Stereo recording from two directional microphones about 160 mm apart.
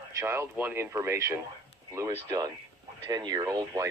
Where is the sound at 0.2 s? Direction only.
15° right (ahead or behind).